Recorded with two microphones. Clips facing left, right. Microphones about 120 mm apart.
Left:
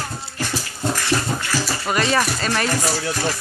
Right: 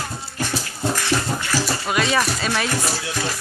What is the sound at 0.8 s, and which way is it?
Dog, centre (ahead or behind).